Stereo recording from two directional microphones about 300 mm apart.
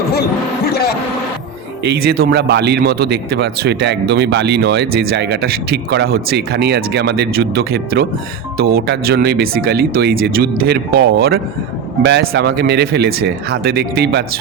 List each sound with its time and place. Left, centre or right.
0.1 s speech: left
1.8 s speech: right